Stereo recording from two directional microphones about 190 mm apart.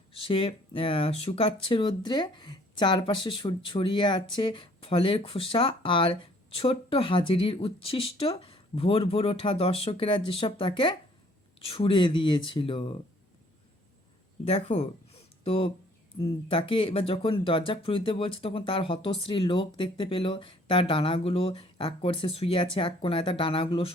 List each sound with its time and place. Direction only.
0.1 s speech: 30° left (ahead or behind)
14.4 s speech: 35° left (ahead or behind)